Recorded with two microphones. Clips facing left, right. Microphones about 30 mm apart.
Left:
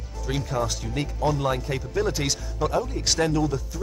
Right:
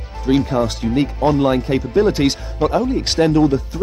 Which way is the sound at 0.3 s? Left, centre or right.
Right.